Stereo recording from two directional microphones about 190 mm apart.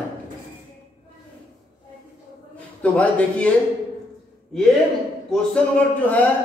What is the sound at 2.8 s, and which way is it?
Speech, 5° left (ahead or behind).